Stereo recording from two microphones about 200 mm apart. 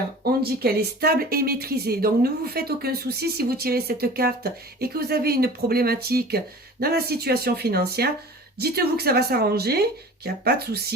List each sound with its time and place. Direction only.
0.4 s speech: 50° right (ahead or behind)